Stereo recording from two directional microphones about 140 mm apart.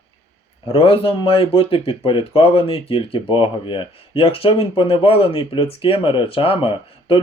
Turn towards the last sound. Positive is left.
turn(degrees=40)  # may be behind; listen again after turning